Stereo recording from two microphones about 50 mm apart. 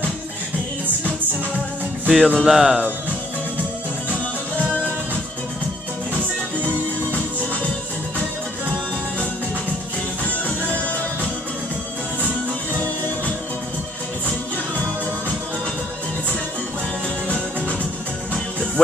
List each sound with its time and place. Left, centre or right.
2.0 s music: centre
2.4 s speech: centre